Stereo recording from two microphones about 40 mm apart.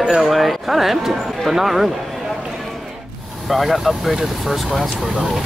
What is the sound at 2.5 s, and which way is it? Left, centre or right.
Music, centre.